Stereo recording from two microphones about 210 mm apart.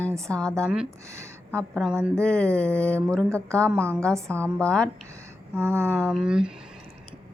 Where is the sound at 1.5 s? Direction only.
Centre (ahead or behind).